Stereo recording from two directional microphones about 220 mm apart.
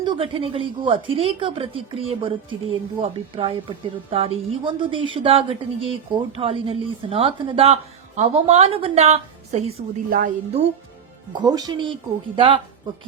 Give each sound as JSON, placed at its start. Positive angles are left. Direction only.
{"t": 0.0, "sound": "a woman's voice", "side_deg": -20}
{"t": 11.3, "sound": "speech", "side_deg": -15}